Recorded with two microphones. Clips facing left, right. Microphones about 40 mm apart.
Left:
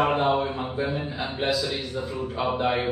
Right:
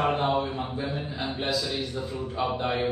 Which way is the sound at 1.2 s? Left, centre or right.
Centre.